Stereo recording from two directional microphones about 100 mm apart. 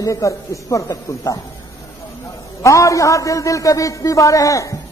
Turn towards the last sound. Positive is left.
turn(degrees=35)  # may be behind; listen again after turning